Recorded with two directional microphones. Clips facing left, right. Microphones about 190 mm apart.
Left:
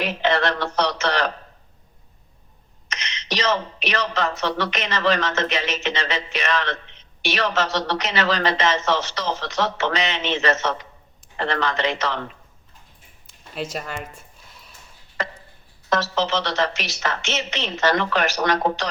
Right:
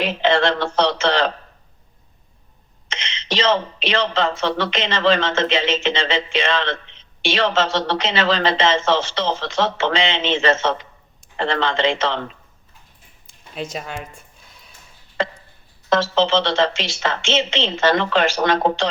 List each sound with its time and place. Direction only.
0.0 s a man's voice: 25° right (ahead or behind)
2.9 s a man's voice: 25° right (ahead or behind)
13.2 s a sound: 5° left (ahead or behind)
15.2 s tick-tock: 30° right (ahead or behind)
15.9 s a man's voice: 25° right (ahead or behind)